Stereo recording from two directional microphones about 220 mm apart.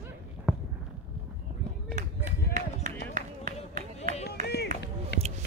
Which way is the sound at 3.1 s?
35° right (ahead or behind).